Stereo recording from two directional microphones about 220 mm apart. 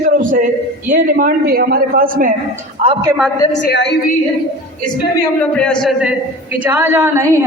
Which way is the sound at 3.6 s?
50° left (ahead or behind).